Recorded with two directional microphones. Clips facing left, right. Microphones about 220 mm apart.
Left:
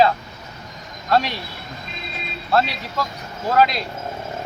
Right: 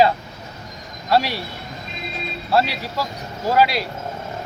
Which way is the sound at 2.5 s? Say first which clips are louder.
Even; 10° right (ahead or behind).